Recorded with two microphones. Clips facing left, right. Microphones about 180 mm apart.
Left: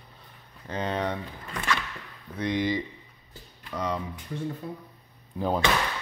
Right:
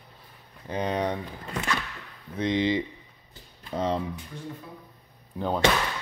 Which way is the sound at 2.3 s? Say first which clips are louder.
Right 2 dB; 20° right (ahead or behind).